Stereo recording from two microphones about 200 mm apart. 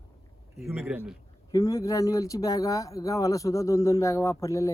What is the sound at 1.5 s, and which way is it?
Speech, 15° left (ahead or behind).